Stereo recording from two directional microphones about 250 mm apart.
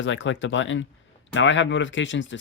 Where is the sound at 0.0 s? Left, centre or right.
Left.